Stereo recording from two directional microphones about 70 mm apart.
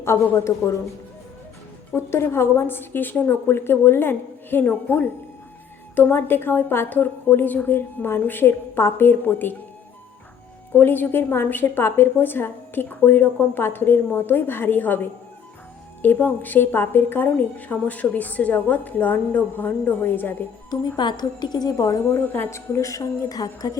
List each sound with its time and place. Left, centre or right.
0.3 s a woman's voice: left
2.0 s a woman's voice: left
10.7 s a woman's voice: left
20.7 s a woman's voice: left
22.1 s a woman's voice: left
22.4 s a woman's voice: left